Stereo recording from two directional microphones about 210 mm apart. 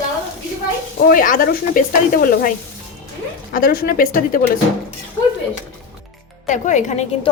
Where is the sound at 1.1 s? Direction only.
40° left (ahead or behind).